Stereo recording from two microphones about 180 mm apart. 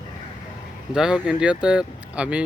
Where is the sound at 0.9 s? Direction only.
5° right (ahead or behind).